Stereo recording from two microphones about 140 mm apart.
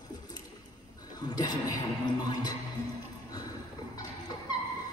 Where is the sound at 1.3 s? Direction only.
30° left (ahead or behind).